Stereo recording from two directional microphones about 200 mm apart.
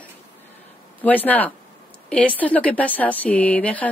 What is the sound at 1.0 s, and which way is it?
Speech, 10° left (ahead or behind).